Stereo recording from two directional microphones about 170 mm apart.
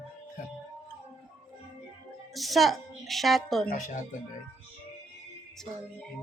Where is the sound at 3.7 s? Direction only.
50° left (ahead or behind).